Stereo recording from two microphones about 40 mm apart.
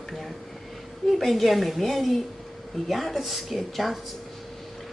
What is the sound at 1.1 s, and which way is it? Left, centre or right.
Speech, centre.